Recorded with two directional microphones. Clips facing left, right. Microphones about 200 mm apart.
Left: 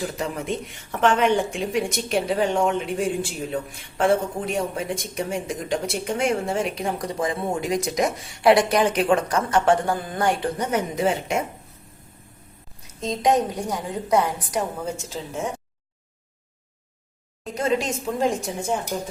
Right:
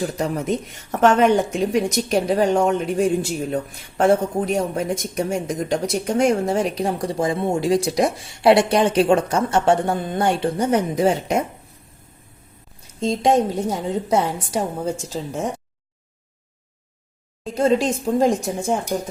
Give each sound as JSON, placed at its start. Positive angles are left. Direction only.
{"t": 0.2, "sound": "a woman's voice", "side_deg": -40}
{"t": 13.0, "sound": "a woman's voice", "side_deg": -30}
{"t": 17.4, "sound": "a woman's voice", "side_deg": -30}